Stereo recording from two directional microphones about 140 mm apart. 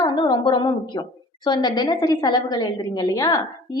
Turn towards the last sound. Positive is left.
turn(degrees=25)  # may be behind; listen again after turning